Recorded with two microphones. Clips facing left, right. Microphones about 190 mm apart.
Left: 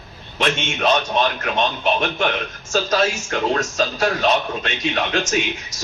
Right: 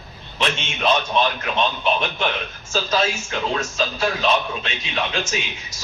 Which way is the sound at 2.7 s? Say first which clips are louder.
Left 3 dB; 50° left (ahead or behind).